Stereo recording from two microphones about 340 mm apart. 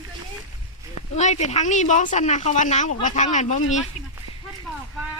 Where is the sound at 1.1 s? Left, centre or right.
Centre.